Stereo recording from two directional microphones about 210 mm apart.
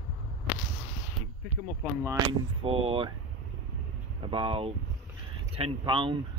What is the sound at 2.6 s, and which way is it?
Speech, 25° right (ahead or behind).